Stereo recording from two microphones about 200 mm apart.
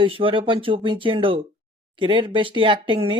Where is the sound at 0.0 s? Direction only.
25° right (ahead or behind).